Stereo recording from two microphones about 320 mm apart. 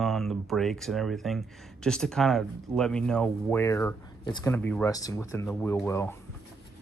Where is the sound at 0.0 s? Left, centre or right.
Centre.